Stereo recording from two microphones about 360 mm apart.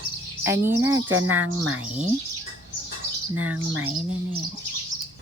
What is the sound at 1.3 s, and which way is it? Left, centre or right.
Speech, right.